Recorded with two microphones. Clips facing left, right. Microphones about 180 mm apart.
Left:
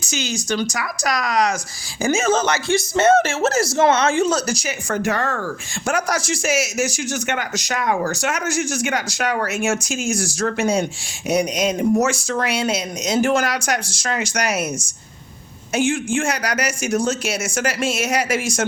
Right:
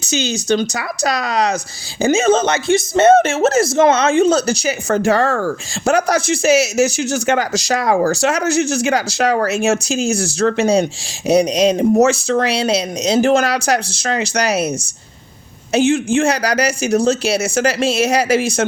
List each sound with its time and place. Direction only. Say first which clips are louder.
0.1 s speech: right 7 dB; 30° right (ahead or behind)
15.7 s speech: right 6 dB; 25° right (ahead or behind)